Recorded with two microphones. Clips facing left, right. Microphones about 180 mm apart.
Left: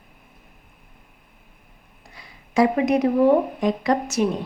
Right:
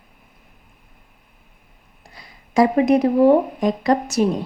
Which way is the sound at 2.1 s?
35° right (ahead or behind).